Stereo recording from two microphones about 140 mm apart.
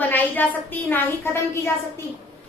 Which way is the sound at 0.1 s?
10° left (ahead or behind).